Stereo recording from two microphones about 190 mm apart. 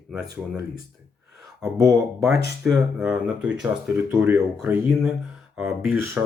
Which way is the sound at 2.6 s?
5° right (ahead or behind).